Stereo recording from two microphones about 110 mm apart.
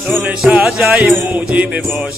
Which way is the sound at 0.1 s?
15° right (ahead or behind).